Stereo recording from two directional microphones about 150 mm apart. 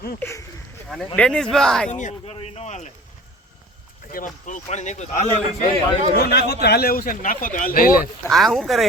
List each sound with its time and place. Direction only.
0.2 s speech: 20° left (ahead or behind)
1.1 s speech: 5° left (ahead or behind)
1.9 s a man's voice: 50° left (ahead or behind)
4.1 s a man's voice: 60° left (ahead or behind)
6.1 s a man's voice: 90° left; by 8.1 s 70° left (ahead or behind)
8.3 s speech: centre (ahead or behind)